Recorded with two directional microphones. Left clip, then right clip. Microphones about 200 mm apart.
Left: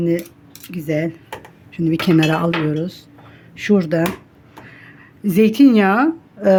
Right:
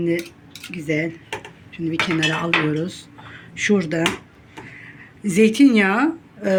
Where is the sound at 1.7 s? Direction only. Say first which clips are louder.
Left 4 dB; 55° left (ahead or behind).